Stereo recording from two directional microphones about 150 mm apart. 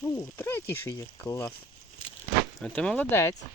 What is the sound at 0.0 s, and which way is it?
Speech, 15° left (ahead or behind).